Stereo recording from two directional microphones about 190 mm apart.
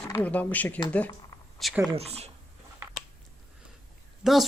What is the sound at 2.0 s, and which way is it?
Speech, 35° right (ahead or behind).